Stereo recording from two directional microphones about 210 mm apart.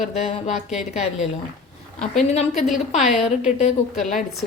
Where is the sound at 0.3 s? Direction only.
30° left (ahead or behind).